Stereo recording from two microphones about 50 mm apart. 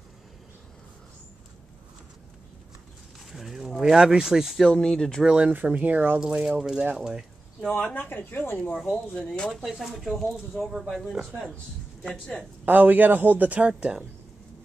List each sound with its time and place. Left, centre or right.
3.3 s a sound: centre
4.6 s speech: centre
5.2 s speech: centre
5.5 s speech: right
6.1 s speech: centre
7.0 s a sound: centre
7.7 s speech: left
8.7 s speech: left
9.7 s speech: centre
12.6 s speech: right
13.7 s speech: right